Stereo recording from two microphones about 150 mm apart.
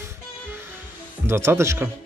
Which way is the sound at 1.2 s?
15° right (ahead or behind).